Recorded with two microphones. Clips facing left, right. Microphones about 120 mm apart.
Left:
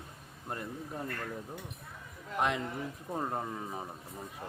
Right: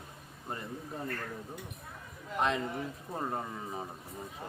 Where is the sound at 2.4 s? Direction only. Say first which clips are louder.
Right 1 dB; 10° left (ahead or behind).